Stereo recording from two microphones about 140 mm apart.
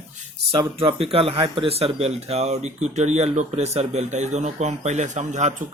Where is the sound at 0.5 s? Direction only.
40° right (ahead or behind).